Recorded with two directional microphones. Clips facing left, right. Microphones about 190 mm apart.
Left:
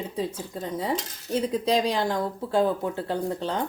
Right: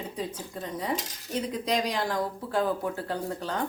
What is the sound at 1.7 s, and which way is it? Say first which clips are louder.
Speech: left 4 dB; 30° left (ahead or behind).